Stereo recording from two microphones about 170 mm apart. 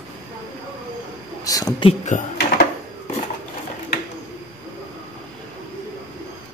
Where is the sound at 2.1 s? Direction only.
50° left (ahead or behind).